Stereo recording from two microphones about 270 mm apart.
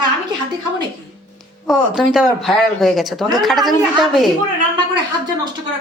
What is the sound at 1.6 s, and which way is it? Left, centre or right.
A woman's voice, centre.